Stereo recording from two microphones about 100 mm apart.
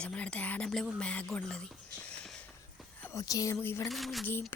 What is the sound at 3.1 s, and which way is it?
Speech, 35° left (ahead or behind).